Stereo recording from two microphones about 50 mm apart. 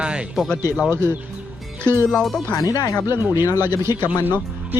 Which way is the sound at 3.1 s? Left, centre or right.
Right.